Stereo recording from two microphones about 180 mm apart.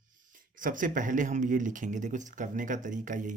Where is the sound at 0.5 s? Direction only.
50° right (ahead or behind).